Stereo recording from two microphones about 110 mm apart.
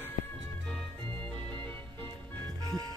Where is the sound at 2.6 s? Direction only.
35° right (ahead or behind).